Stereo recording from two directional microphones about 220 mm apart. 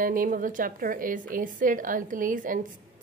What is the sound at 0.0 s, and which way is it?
A woman's voice, 40° right (ahead or behind).